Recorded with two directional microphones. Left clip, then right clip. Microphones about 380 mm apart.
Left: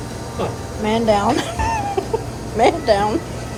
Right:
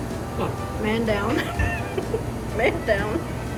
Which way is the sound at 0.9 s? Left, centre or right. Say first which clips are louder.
Left 8 dB; centre.